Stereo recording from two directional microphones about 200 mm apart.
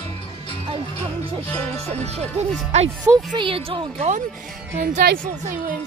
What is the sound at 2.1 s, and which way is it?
Speech, 35° right (ahead or behind).